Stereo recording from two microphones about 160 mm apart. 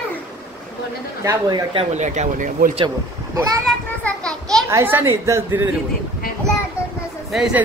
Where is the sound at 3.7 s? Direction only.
5° left (ahead or behind).